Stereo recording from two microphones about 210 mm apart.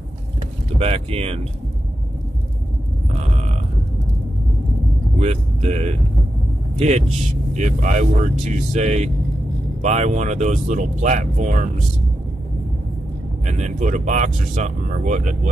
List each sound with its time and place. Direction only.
0.7 s speech: 30° right (ahead or behind)
5.2 s speech: 30° right (ahead or behind)
7.5 s speech: 35° right (ahead or behind)
13.5 s speech: 35° right (ahead or behind)